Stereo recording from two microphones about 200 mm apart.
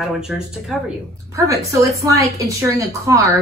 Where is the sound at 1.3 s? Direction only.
15° right (ahead or behind).